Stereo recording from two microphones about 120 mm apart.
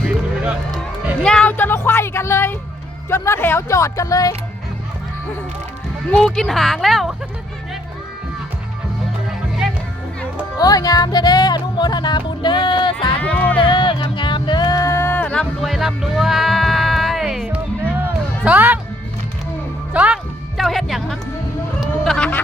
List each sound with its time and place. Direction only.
1.2 s speech: 5° left (ahead or behind); by 4.4 s 30° left (ahead or behind)
6.1 s speech: 5° left (ahead or behind)
9.6 s music: 5° right (ahead or behind)
10.6 s speech: 30° left (ahead or behind)
13.1 s music: 15° left (ahead or behind)
13.7 s music: 45° left (ahead or behind); by 15.4 s 10° left (ahead or behind)
15.6 s music: centre (ahead or behind)
17.8 s music: 15° right (ahead or behind)
19.9 s speech: 10° right (ahead or behind)
20.6 s music: centre (ahead or behind)
21.8 s a sound: 5° left (ahead or behind)